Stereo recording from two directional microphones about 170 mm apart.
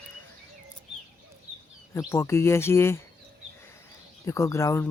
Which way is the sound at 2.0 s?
15° left (ahead or behind).